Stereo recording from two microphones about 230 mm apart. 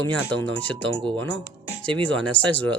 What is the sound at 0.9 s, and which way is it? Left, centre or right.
Speech, right.